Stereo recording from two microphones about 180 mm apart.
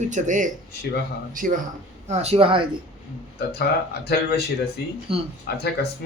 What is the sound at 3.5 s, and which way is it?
Speech, 60° left (ahead or behind).